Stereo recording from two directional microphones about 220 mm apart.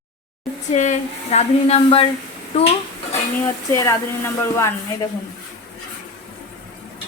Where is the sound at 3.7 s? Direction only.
15° left (ahead or behind).